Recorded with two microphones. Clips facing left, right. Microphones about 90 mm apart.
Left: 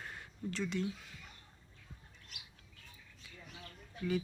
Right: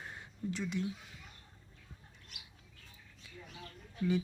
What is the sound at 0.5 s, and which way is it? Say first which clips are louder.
Speech: left 1 dB; 10° right (ahead or behind).